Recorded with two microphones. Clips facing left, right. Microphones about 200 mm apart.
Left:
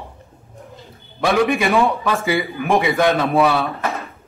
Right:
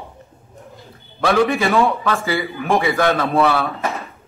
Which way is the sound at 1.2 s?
15° left (ahead or behind).